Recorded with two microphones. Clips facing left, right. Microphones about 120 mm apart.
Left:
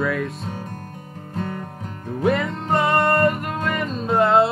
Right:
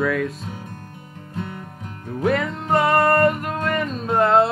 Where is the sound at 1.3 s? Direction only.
40° left (ahead or behind).